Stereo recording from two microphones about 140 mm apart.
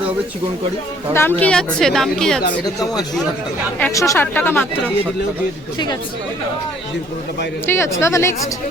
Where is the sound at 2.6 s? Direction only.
25° left (ahead or behind).